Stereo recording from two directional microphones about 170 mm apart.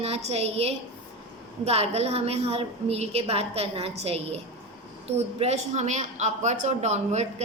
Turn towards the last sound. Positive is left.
turn(degrees=-40)  # may be behind; listen again after turning